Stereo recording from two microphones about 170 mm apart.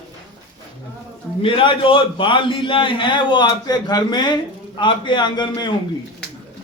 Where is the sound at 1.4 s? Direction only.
30° left (ahead or behind).